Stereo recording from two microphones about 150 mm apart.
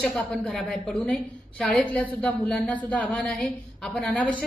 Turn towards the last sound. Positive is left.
turn(degrees=10)  # may be behind; listen again after turning